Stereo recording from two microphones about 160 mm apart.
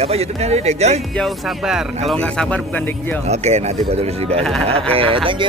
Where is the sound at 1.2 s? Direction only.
Centre (ahead or behind).